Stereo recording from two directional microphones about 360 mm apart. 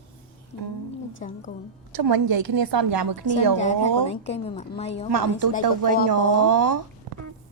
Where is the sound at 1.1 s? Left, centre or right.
Left.